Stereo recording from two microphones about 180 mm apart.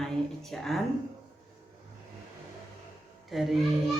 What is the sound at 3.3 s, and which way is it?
Speech, centre (ahead or behind).